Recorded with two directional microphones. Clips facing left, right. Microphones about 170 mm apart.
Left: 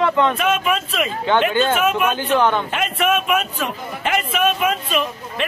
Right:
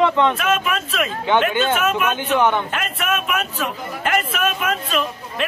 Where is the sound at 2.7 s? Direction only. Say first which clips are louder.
Left 4 dB; centre (ahead or behind).